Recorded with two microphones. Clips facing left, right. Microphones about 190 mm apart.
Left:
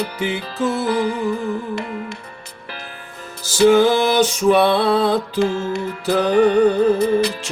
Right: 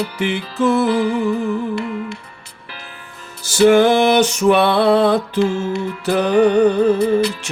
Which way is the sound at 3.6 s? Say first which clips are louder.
Right 2 dB; 65° right (ahead or behind).